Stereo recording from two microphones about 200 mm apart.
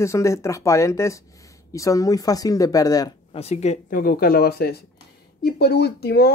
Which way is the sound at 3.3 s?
35° left (ahead or behind).